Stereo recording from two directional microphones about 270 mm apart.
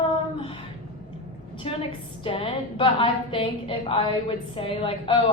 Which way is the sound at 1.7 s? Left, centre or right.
Centre.